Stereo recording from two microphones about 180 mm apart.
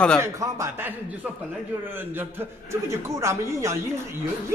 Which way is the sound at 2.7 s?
15° right (ahead or behind).